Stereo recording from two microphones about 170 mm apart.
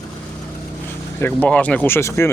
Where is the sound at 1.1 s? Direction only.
10° left (ahead or behind).